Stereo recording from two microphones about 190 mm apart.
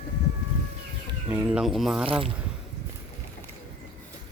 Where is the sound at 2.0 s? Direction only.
30° right (ahead or behind).